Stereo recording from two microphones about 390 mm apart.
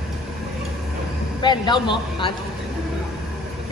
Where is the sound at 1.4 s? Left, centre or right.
Centre.